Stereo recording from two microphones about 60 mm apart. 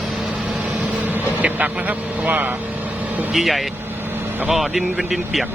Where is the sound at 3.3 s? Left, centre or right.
Centre.